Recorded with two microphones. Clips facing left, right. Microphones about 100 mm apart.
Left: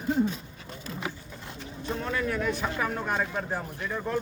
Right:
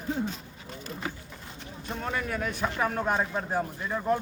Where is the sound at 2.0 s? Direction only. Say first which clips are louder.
Left 1 dB; 15° right (ahead or behind).